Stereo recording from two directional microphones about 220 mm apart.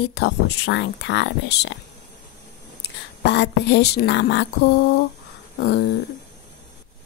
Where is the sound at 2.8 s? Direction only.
50° left (ahead or behind).